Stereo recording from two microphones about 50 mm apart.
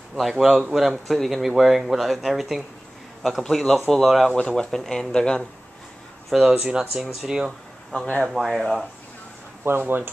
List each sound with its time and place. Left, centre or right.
0.2 s a man's voice: centre
3.4 s speech: centre
3.9 s speech: centre
4.4 s speech: centre
6.3 s speech: centre
6.7 s speech: centre
7.0 s speech: centre
7.9 s speech: left
8.3 s speech: centre
9.7 s speech: right